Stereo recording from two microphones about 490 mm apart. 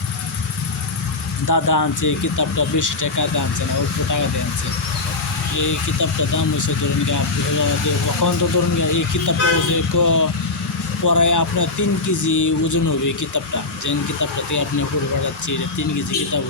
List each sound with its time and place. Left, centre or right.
1.5 s speech: left
5.5 s speech: left
8.2 s speech: left